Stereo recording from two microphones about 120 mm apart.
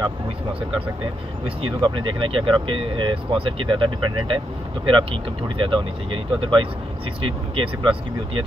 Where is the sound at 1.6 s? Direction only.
45° right (ahead or behind).